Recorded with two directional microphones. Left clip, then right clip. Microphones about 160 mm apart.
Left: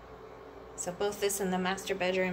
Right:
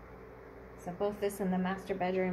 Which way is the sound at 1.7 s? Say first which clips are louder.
Left 3 dB; 20° right (ahead or behind).